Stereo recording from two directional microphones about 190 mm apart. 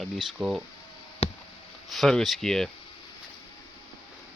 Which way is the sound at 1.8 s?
Centre (ahead or behind).